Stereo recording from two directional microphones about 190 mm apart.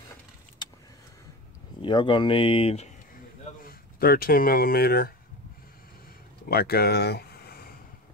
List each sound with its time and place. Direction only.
0.6 s vehicle: 25° left (ahead or behind)
1.8 s speech: 25° left (ahead or behind)
3.6 s speech: 50° left (ahead or behind)
6.5 s speech: 55° left (ahead or behind)